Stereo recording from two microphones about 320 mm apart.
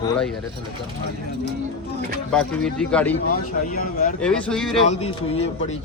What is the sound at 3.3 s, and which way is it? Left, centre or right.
Speech, left.